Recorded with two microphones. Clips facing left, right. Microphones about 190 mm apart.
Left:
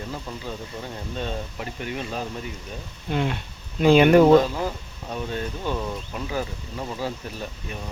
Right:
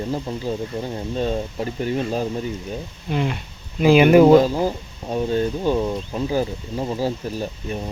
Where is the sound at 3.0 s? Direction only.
Centre (ahead or behind).